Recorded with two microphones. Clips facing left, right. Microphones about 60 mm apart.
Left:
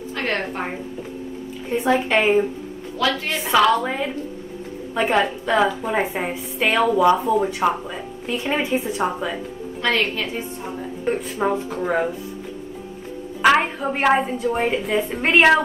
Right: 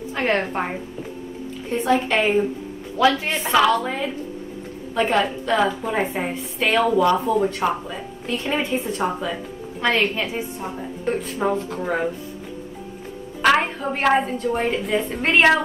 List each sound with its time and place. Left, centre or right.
0.1 s a woman's voice: centre
1.7 s a woman's voice: centre
3.0 s a woman's voice: centre
3.4 s a woman's voice: centre
9.8 s a woman's voice: centre
11.1 s a woman's voice: centre
13.4 s a woman's voice: centre